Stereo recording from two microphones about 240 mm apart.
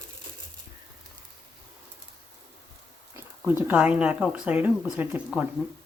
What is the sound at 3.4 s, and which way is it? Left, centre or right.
Speech, centre.